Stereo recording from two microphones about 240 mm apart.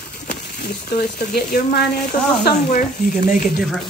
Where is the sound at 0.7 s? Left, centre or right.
Left.